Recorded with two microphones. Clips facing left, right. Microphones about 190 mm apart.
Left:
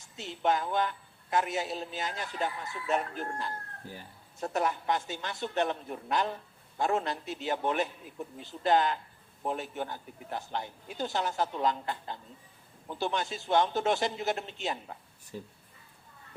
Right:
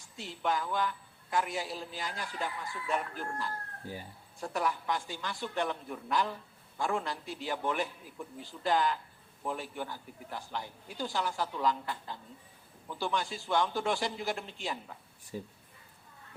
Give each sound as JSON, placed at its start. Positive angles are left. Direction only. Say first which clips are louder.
{"t": 0.2, "sound": "a man's voice", "louder": "left 4 dB", "side_deg": 20}
{"t": 4.5, "sound": "a man's voice", "louder": "left 3 dB", "side_deg": 20}
{"t": 15.3, "sound": "speech", "louder": "right 2 dB", "side_deg": -15}